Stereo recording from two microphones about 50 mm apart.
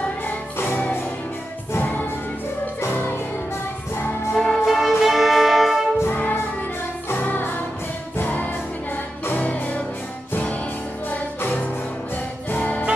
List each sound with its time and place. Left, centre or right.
1.8 s music: left
4.4 s music: centre
6.0 s music: left
11.1 s music: left